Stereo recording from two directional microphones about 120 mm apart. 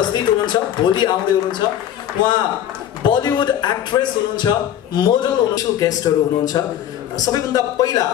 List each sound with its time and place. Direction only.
0.0 s a man's voice: 40° left (ahead or behind)
3.0 s a man's voice: 40° left (ahead or behind)